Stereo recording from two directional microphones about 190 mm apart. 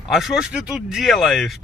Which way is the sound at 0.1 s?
Centre (ahead or behind).